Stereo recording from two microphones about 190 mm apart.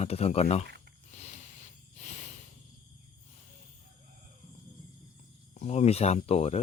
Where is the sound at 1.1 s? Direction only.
35° left (ahead or behind).